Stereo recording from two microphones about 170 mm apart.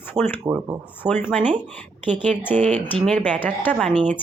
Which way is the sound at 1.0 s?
10° left (ahead or behind).